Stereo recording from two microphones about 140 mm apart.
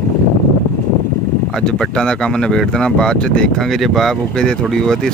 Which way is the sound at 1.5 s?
5° left (ahead or behind).